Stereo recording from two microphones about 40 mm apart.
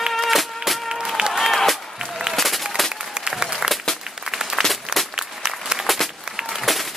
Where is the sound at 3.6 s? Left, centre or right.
Centre.